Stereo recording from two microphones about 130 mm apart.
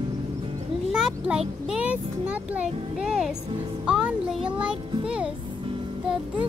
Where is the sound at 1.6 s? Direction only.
10° right (ahead or behind).